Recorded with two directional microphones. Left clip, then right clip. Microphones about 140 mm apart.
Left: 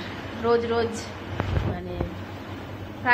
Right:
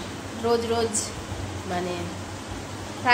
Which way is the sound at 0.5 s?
15° right (ahead or behind).